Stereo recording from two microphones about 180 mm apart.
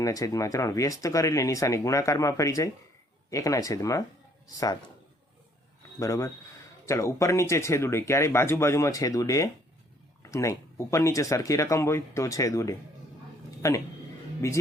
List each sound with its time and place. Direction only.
0.0 s speech: 20° left (ahead or behind)
6.0 s speech: 20° left (ahead or behind)